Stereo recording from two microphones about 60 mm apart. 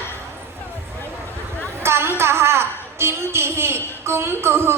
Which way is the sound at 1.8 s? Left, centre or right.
Right.